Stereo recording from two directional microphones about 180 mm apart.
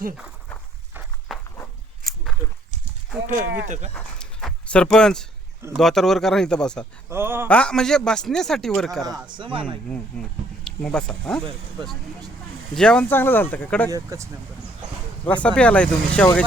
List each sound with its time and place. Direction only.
1.3 s walk: centre (ahead or behind)
3.2 s speech: 45° right (ahead or behind)
3.9 s a sound: 5° left (ahead or behind)
5.7 s speech: centre (ahead or behind)
7.1 s speech: 10° right (ahead or behind)
7.4 s speech: 5° left (ahead or behind)
9.0 s speech: 25° right (ahead or behind)
9.9 s speech: 5° left (ahead or behind)
12.7 s speech: 5° left (ahead or behind)
13.9 s speech: 15° right (ahead or behind)
15.3 s speech: 5° left (ahead or behind)